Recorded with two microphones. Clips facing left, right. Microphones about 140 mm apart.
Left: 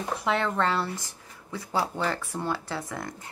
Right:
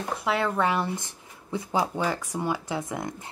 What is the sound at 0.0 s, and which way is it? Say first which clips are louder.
Speech: even; centre (ahead or behind).